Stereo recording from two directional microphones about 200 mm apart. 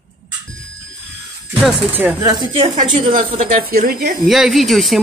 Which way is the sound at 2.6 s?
30° right (ahead or behind).